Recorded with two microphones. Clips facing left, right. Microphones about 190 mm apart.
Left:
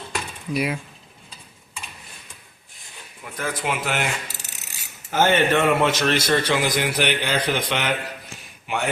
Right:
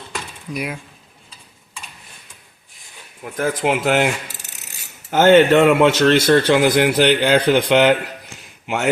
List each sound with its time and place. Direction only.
0.1 s a sound: centre (ahead or behind)
3.3 s speech: 45° right (ahead or behind)
3.7 s speech: 80° right
5.1 s a man's voice: 80° right
8.6 s speech: 75° right (ahead or behind)